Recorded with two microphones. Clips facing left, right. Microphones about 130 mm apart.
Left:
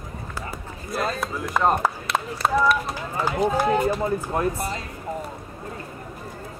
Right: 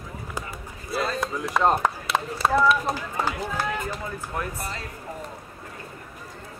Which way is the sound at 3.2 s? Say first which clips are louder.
Left 8 dB; 15° left (ahead or behind).